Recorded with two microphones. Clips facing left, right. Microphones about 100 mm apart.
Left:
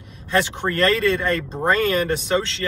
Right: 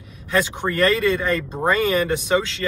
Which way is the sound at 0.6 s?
15° right (ahead or behind).